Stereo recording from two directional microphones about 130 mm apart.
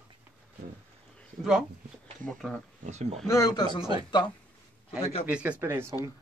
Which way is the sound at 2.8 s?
60° right (ahead or behind).